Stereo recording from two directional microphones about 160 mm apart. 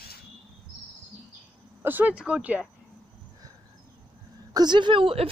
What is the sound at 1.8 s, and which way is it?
Speech, 10° right (ahead or behind).